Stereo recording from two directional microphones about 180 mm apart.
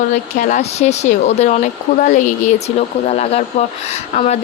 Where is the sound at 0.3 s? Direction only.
45° left (ahead or behind).